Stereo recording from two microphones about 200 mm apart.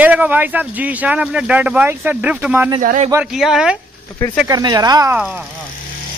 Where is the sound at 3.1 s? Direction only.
5° right (ahead or behind).